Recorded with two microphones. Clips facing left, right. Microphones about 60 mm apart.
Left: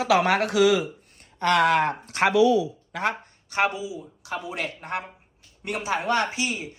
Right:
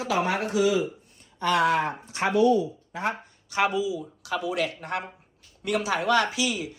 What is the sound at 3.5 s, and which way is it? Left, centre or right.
Speech, left.